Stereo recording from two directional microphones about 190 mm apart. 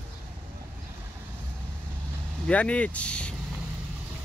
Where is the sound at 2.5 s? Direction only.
5° left (ahead or behind).